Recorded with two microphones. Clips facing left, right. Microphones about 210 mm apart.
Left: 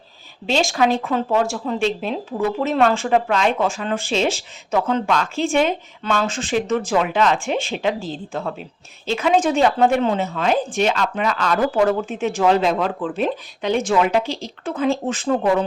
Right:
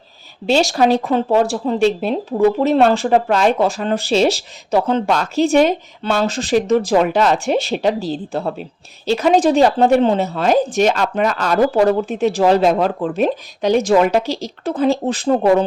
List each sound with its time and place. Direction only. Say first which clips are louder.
0.4 s speech: right 4 dB; 35° right (ahead or behind)